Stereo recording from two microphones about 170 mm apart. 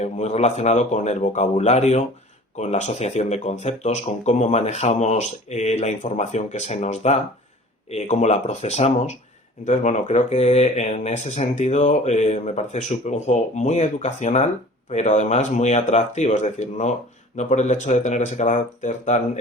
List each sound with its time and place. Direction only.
0.0 s speech: 40° left (ahead or behind)